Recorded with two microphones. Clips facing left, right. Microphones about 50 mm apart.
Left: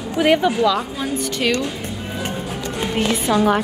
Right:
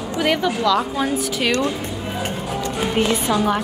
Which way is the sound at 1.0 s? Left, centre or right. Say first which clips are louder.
Right 1 dB; centre.